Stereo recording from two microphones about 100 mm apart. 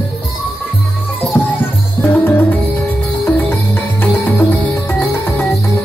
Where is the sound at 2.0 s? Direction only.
25° left (ahead or behind).